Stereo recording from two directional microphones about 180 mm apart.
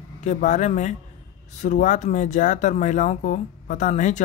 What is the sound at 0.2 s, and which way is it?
Speech, 40° left (ahead or behind).